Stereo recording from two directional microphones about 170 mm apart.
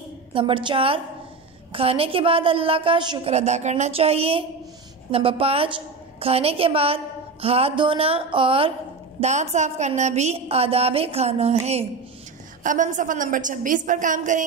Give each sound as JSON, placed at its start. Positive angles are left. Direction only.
{"t": 0.3, "sound": "a woman's voice", "side_deg": -30}
{"t": 3.3, "sound": "a woman's voice", "side_deg": -40}
{"t": 9.2, "sound": "a woman's voice", "side_deg": -45}
{"t": 12.6, "sound": "a woman's voice", "side_deg": -50}